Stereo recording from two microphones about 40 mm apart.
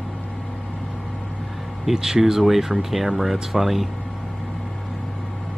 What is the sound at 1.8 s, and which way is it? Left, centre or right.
Speech, centre.